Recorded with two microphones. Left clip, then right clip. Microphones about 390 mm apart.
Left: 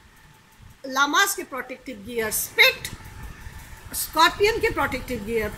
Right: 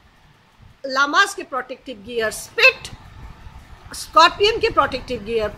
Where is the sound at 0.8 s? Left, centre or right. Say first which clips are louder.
Right 4 dB; centre.